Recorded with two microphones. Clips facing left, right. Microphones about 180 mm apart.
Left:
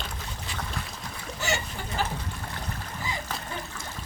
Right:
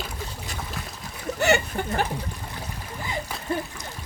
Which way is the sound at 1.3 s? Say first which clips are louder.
Right 9 dB; 60° right (ahead or behind).